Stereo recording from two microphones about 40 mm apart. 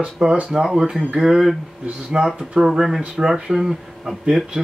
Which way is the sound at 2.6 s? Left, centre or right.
Centre.